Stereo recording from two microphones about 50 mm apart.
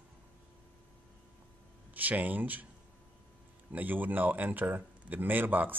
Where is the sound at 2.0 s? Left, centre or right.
Right.